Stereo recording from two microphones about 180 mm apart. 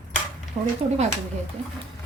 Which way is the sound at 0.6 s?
35° right (ahead or behind).